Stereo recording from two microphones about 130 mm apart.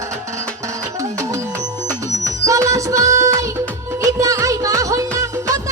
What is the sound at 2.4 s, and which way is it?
Music, 25° right (ahead or behind).